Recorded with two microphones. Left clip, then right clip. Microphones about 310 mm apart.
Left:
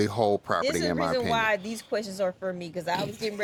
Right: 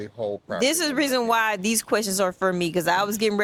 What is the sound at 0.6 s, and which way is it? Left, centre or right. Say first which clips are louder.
Speech: right 4 dB; right.